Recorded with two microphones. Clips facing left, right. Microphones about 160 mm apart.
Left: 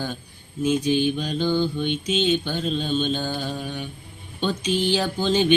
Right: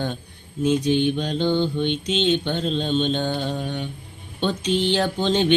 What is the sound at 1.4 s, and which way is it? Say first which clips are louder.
Mantra: right 1 dB; 25° right (ahead or behind).